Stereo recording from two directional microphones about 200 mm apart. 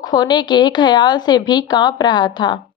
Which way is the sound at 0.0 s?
20° left (ahead or behind).